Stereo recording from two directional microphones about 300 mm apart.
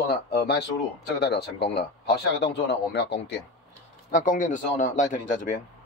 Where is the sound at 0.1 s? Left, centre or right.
Left.